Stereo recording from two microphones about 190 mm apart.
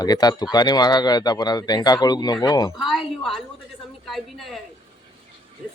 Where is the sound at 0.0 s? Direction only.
20° left (ahead or behind).